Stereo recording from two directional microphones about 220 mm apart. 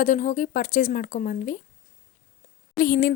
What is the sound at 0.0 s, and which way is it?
Speech, 35° left (ahead or behind).